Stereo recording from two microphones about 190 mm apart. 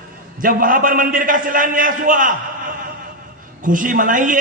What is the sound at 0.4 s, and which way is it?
A man's voice, 45° right (ahead or behind).